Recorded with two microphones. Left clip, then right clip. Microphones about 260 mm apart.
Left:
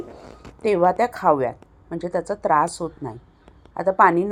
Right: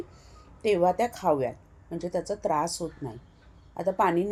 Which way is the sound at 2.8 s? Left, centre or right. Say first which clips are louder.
Left 6 dB; centre.